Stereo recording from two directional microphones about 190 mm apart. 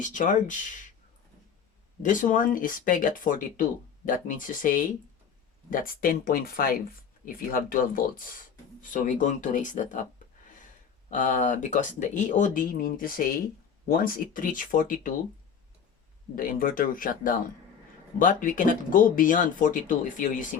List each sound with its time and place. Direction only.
0.0 s speech: 40° left (ahead or behind)
2.0 s speech: 45° left (ahead or behind)
11.1 s speech: 45° left (ahead or behind)
16.3 s speech: 45° left (ahead or behind)